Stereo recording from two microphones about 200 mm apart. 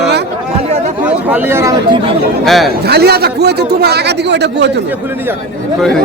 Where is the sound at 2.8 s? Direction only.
55° right (ahead or behind).